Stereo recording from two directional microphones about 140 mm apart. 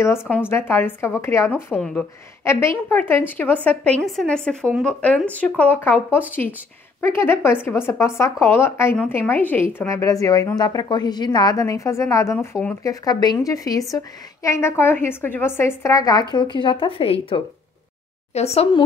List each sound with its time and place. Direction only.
0.0 s a woman's voice: 20° left (ahead or behind)
7.2 s a woman's voice: 15° left (ahead or behind); by 18.7 s 50° left (ahead or behind)